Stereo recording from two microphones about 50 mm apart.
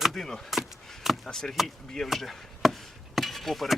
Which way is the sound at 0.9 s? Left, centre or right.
Centre.